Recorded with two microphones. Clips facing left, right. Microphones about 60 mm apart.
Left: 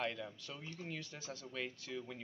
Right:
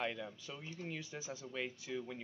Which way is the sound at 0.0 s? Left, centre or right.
Centre.